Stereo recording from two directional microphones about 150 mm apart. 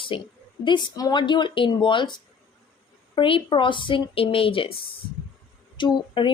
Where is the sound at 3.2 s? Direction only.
35° left (ahead or behind).